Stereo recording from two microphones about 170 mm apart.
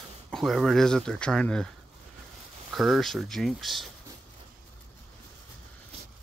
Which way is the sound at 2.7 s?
Centre (ahead or behind).